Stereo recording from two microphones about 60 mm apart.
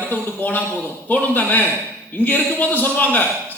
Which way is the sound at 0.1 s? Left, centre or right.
Left.